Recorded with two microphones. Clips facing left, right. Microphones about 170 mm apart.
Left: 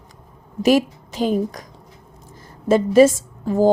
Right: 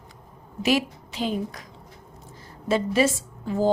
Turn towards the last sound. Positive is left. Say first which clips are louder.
# left 7 dB
turn(degrees=45)  # may be behind; listen again after turning